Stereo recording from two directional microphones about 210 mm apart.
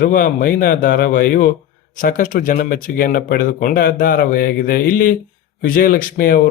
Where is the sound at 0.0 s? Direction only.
40° left (ahead or behind).